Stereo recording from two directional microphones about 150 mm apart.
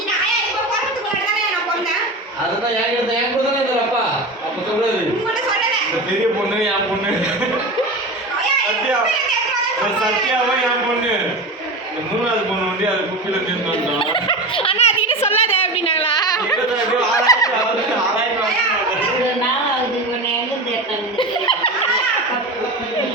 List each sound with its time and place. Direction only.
14.0 s giggle: 35° left (ahead or behind)
15.4 s a sound: 40° left (ahead or behind); by 17.4 s 20° left (ahead or behind)
21.2 s laughter: 35° left (ahead or behind)